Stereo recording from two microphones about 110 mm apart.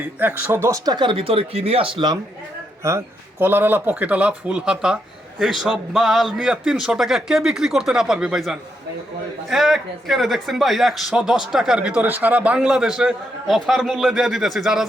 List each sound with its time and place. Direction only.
0.2 s speech: 15° right (ahead or behind)
0.9 s speech: 45° right (ahead or behind)
2.8 s speech: 25° right (ahead or behind); by 14.8 s 5° right (ahead or behind)